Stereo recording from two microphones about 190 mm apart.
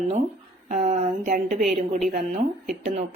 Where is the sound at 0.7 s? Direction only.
40° right (ahead or behind).